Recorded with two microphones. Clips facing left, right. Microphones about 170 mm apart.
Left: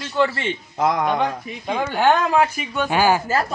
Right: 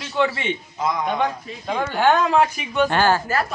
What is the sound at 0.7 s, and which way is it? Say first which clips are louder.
Speech: left 5 dB; 65° left (ahead or behind).